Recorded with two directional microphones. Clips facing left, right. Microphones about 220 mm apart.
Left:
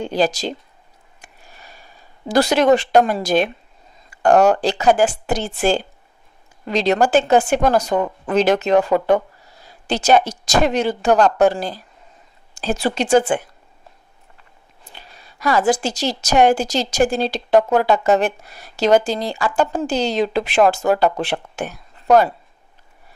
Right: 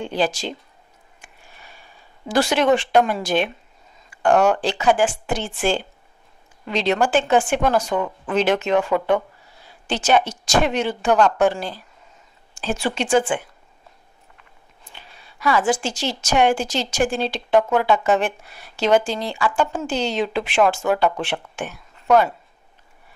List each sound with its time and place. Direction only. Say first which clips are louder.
0.0 s a woman's voice: left 3 dB; 40° left (ahead or behind)
1.2 s a sound: left 3 dB; 40° left (ahead or behind)
4.1 s a woman's voice: left 3 dB; 40° left (ahead or behind)
14.9 s a woman's voice: left 2 dB; 40° left (ahead or behind)